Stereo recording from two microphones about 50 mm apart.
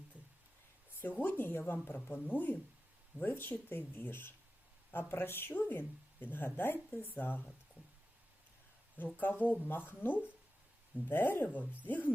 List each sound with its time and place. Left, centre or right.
0.9 s speech: left
3.2 s speech: left
9.0 s speech: left